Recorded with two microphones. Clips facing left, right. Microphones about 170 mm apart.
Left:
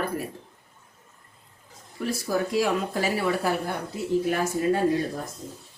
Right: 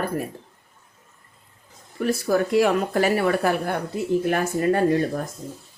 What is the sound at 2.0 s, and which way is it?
Speech, 60° right (ahead or behind).